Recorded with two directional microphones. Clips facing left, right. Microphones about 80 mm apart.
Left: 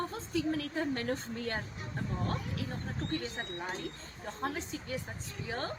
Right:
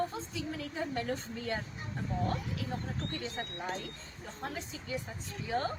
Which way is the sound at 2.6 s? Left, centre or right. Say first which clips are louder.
Right 1 dB; left.